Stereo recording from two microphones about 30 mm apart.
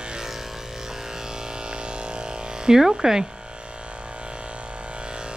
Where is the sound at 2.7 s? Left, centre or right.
Centre.